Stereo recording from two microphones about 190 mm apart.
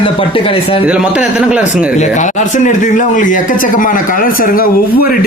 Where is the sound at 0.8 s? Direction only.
5° right (ahead or behind).